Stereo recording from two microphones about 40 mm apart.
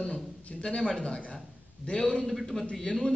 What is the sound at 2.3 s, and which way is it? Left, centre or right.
Speech, centre.